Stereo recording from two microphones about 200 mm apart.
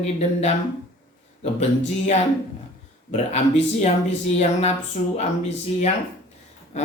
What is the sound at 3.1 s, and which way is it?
Speech, 35° left (ahead or behind).